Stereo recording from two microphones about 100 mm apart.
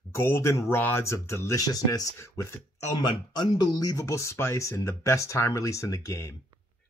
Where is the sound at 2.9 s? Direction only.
50° left (ahead or behind).